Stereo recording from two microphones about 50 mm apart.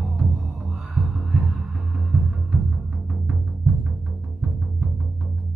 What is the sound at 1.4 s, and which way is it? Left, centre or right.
Music, centre.